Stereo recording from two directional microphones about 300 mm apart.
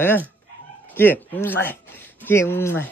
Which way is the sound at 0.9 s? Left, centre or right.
Centre.